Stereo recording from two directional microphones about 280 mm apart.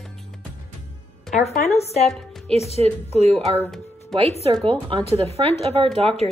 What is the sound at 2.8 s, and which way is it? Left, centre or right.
Speech, right.